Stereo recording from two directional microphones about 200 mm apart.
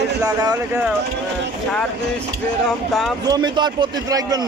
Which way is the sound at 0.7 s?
5° right (ahead or behind).